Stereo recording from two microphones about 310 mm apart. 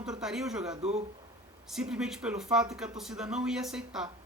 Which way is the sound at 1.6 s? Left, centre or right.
Centre.